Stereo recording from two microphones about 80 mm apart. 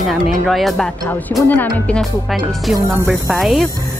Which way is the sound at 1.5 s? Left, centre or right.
Left.